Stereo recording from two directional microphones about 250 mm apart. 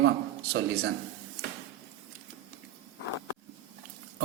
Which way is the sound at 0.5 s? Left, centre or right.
Right.